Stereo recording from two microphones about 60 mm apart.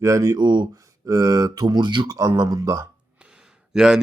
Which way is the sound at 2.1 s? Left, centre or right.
Right.